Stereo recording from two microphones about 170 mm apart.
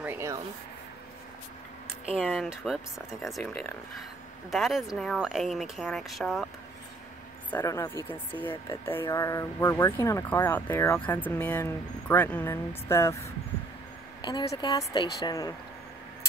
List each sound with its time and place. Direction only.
0.0 s rub: 15° right (ahead or behind)
2.1 s speech: 5° right (ahead or behind)
7.5 s speech: 20° left (ahead or behind)
14.2 s a woman's voice: 30° left (ahead or behind)
14.7 s a woman's voice: 20° left (ahead or behind)